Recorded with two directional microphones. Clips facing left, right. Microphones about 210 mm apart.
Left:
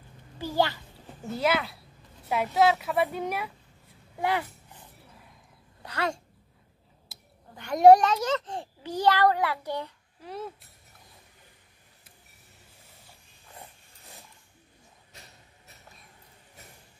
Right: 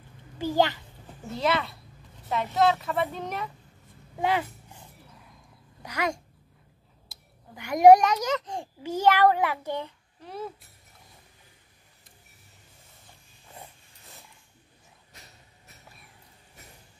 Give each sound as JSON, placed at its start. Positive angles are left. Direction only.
{"t": 0.4, "sound": "a child's voice", "side_deg": -15}
{"t": 1.3, "sound": "speech", "side_deg": 5}
{"t": 4.2, "sound": "a child's voice", "side_deg": -20}
{"t": 5.8, "sound": "a child's voice", "side_deg": -10}
{"t": 7.1, "sound": "a sound", "side_deg": 5}
{"t": 7.5, "sound": "a child's voice", "side_deg": -10}
{"t": 10.2, "sound": "speech", "side_deg": 0}